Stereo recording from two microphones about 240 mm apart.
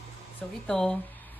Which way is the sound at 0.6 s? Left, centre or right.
Centre.